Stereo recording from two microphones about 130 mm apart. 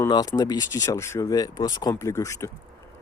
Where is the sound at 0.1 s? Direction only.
30° left (ahead or behind).